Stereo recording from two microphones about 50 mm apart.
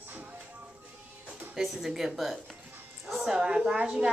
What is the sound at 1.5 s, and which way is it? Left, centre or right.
A woman's voice, centre.